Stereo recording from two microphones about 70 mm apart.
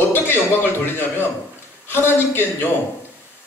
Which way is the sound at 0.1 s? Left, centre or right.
Left.